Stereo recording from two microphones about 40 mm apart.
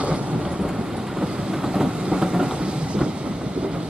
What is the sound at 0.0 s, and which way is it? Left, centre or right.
Train, right.